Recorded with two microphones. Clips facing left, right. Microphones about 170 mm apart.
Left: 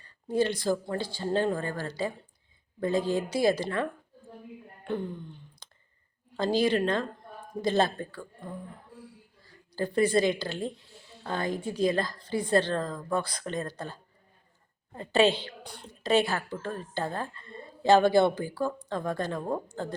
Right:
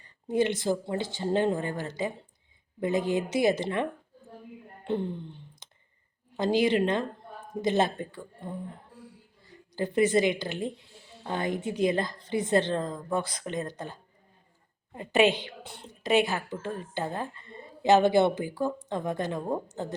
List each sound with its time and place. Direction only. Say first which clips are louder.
0.0 s a woman's voice: right 1 dB; 20° right (ahead or behind)
4.8 s a sound: right 3 dB; 25° right (ahead or behind)
6.3 s a woman's voice: right 1 dB; 20° right (ahead or behind)